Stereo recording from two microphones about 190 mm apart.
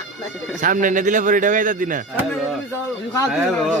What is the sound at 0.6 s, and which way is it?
A man's voice, 45° right (ahead or behind).